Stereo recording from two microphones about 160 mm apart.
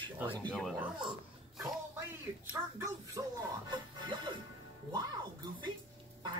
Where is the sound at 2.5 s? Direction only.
15° right (ahead or behind).